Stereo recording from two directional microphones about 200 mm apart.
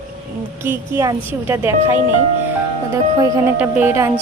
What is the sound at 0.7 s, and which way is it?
Speech, 15° right (ahead or behind).